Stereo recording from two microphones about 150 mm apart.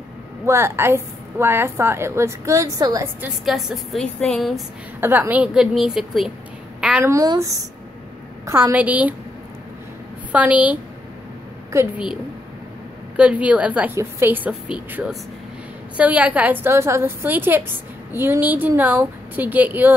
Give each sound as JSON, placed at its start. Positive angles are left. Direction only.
{"t": 0.5, "sound": "a woman's voice", "side_deg": -15}
{"t": 3.4, "sound": "a woman's voice", "side_deg": 0}
{"t": 5.0, "sound": "a woman's voice", "side_deg": -15}
{"t": 7.1, "sound": "a woman's voice", "side_deg": -20}
{"t": 10.3, "sound": "a woman's voice", "side_deg": -10}
{"t": 13.1, "sound": "a woman's voice", "side_deg": -10}